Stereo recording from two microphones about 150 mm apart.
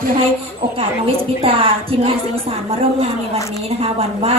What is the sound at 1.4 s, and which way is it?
Speech, 40° right (ahead or behind).